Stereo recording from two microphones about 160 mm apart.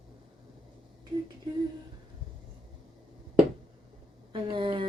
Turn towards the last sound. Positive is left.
turn(degrees=-30)  # may be behind; listen again after turning